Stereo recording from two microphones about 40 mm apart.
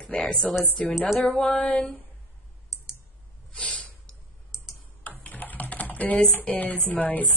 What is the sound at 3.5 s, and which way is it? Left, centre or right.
Snort, left.